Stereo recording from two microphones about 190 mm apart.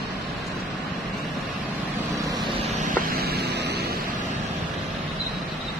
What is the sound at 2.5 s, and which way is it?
Vehicle, 35° right (ahead or behind).